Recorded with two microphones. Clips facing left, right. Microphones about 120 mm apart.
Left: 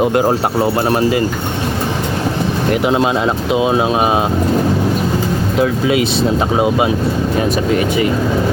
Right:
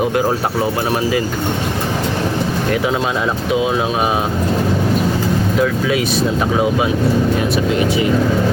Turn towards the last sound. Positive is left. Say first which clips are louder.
# left 2 dB
turn(degrees=25)  # may be behind; listen again after turning